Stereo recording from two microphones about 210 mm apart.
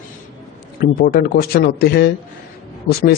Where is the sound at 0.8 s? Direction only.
45° left (ahead or behind).